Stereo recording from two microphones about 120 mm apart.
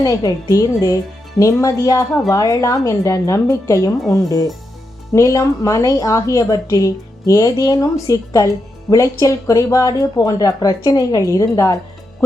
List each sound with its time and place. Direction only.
0.0 s speech: 30° left (ahead or behind)